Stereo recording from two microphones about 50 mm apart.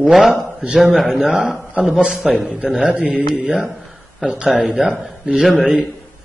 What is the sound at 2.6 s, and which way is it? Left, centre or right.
A man's voice, right.